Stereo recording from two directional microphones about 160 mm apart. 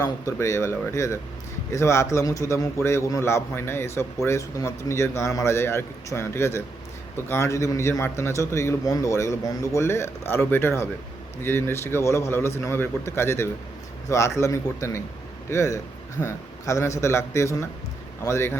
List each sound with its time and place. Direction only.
0.0 s a man's voice: 20° left (ahead or behind)